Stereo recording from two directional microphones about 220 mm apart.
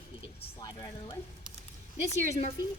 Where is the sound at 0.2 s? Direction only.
20° left (ahead or behind).